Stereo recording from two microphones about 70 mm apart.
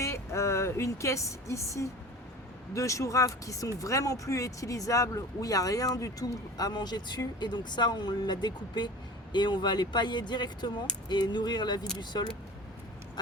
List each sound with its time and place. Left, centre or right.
0.0 s speech: left